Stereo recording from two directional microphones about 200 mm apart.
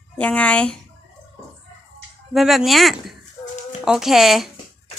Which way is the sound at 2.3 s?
Centre (ahead or behind).